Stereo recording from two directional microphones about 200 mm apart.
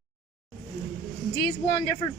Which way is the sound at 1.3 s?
50° left (ahead or behind).